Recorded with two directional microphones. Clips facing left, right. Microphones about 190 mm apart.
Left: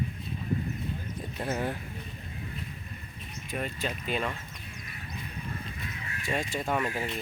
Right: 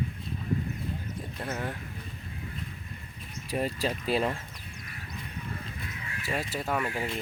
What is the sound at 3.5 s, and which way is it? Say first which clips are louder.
Speech: right 4 dB; 35° right (ahead or behind).